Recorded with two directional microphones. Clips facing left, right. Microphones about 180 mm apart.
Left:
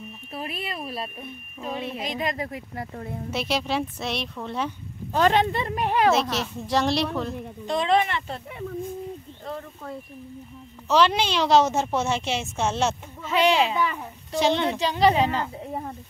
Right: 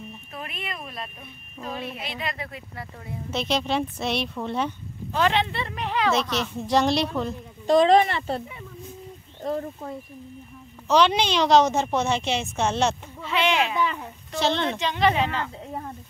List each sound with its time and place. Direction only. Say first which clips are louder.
0.4 s speech: left 3 dB; 30° left (ahead or behind)
2.0 s speech: left 5 dB; 40° left (ahead or behind)
3.3 s a woman's voice: right 2 dB; 5° left (ahead or behind)
5.1 s speech: left 3 dB; 45° left (ahead or behind)
6.7 s a woman's voice: right 2 dB; centre (ahead or behind)
7.6 s speech: right 6 dB; 40° right (ahead or behind)
9.4 s speech: right 9 dB; 40° right (ahead or behind)
10.9 s a woman's voice: right 1 dB; centre (ahead or behind)
13.2 s speech: left 3 dB; 40° left (ahead or behind)
13.7 s speech: even; 10° left (ahead or behind)
14.8 s speech: left 3 dB; 35° left (ahead or behind)